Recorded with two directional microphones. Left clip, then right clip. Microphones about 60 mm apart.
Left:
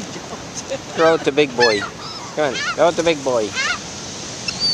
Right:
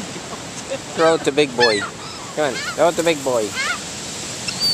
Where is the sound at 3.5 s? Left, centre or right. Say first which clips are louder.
Left 2 dB; left.